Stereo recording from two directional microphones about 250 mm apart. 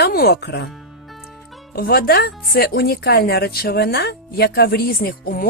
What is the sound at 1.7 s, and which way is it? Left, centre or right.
Speech, left.